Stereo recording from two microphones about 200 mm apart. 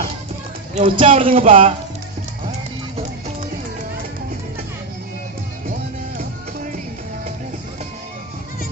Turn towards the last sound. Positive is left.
turn(degrees=-40)  # may be behind; listen again after turning